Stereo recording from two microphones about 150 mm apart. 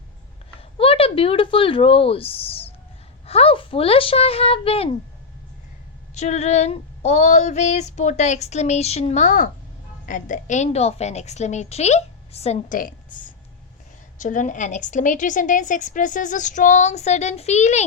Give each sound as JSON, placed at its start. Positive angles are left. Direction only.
{"t": 0.8, "sound": "speech", "side_deg": 40}
{"t": 6.1, "sound": "female singing", "side_deg": 50}
{"t": 14.2, "sound": "a woman's voice", "side_deg": 60}